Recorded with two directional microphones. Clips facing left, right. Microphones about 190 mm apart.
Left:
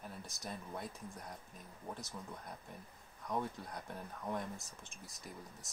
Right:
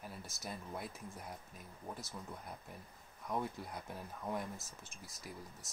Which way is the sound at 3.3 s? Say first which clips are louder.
Even; 15° right (ahead or behind).